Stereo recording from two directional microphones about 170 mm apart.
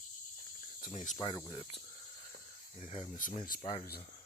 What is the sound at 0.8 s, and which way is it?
Cricket, 45° left (ahead or behind).